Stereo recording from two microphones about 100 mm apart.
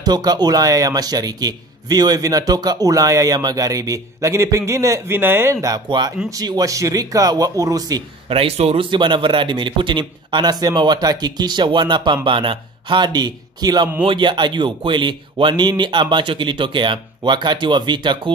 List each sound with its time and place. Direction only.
0.0 s a man's voice: 40° right (ahead or behind); by 5.7 s 25° right (ahead or behind)
5.7 s a man's voice: 45° right (ahead or behind)
8.3 s speech: 70° right (ahead or behind)
8.9 s speech: 55° right (ahead or behind)
14.0 s speech: 55° right (ahead or behind)